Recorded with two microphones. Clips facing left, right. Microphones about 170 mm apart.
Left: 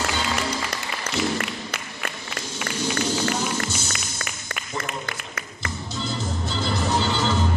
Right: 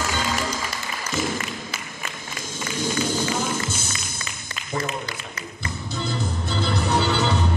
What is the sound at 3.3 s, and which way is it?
Music, 55° right (ahead or behind).